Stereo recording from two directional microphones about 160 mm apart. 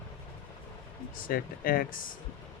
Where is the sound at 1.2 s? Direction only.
65° left (ahead or behind).